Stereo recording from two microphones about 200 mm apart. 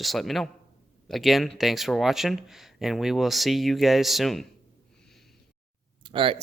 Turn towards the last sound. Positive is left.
turn(degrees=-25)  # may be behind; listen again after turning